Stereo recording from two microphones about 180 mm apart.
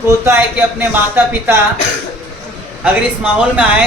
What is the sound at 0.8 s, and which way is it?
Speech, 10° right (ahead or behind).